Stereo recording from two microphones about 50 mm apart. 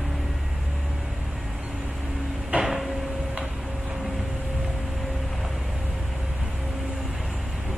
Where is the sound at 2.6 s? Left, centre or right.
Centre.